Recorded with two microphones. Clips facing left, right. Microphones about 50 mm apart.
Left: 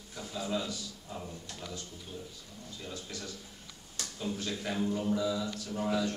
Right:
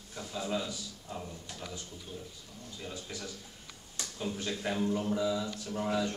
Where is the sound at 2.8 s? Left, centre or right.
Centre.